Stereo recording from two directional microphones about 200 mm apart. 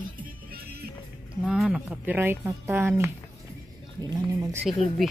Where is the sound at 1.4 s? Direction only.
5° right (ahead or behind); by 4.6 s 20° right (ahead or behind).